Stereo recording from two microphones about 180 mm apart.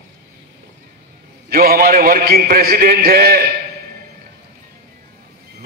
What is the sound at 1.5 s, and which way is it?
A man's voice, 55° right (ahead or behind).